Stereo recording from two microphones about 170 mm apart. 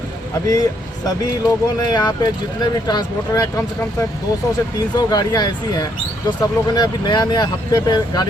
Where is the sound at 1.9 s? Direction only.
25° left (ahead or behind).